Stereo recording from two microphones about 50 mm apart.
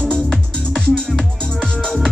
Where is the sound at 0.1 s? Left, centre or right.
Centre.